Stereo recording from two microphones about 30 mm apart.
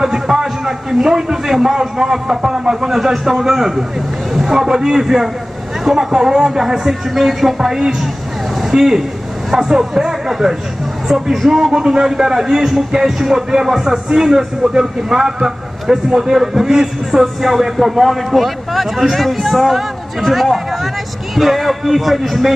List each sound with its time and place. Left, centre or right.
0.0 s a man's voice: centre
17.4 s a man's voice: centre